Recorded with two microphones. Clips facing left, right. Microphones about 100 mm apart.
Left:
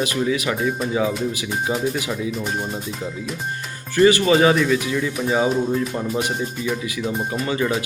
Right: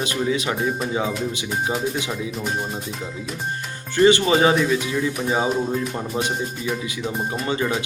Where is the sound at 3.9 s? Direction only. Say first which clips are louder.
Left 1 dB; 30° right (ahead or behind).